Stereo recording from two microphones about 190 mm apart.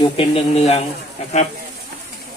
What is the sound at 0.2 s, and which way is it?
Speech, 35° left (ahead or behind).